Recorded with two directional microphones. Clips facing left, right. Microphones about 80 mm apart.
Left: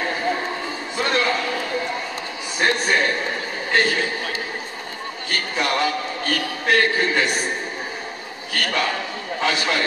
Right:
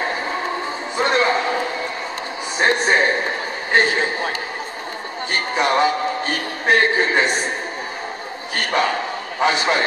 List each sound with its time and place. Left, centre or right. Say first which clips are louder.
0.9 s a sound: right 4 dB; right
3.7 s a man's voice: right 3 dB; right
5.3 s a man's voice: right 4 dB; right
8.5 s a man's voice: right 3 dB; right